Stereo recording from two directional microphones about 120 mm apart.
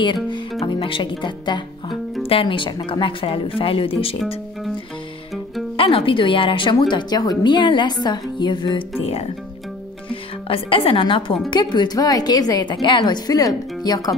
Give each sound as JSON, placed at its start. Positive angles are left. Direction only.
{"t": 0.0, "sound": "a woman's voice", "side_deg": 40}
{"t": 5.8, "sound": "a woman's voice", "side_deg": 50}
{"t": 9.0, "sound": "speech", "side_deg": 60}
{"t": 10.5, "sound": "a woman's voice", "side_deg": 50}